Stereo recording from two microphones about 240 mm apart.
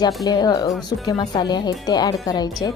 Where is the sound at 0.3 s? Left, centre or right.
Centre.